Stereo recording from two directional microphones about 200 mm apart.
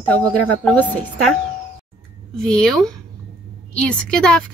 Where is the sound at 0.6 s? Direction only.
10° left (ahead or behind).